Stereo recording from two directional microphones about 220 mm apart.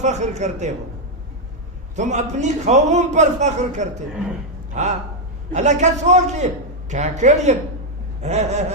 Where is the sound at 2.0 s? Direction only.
30° right (ahead or behind).